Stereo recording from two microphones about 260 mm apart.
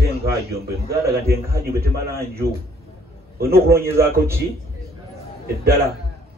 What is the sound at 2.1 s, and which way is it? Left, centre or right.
A man's voice, right.